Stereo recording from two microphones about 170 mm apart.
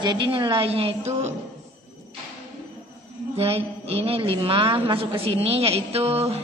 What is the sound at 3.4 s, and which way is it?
A man's voice, 35° right (ahead or behind).